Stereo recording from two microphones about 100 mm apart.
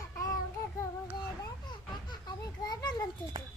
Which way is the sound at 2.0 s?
40° left (ahead or behind).